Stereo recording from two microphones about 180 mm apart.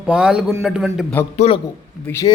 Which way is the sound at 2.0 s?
15° left (ahead or behind).